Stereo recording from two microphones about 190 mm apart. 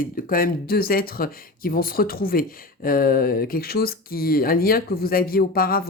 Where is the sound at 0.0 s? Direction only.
50° left (ahead or behind).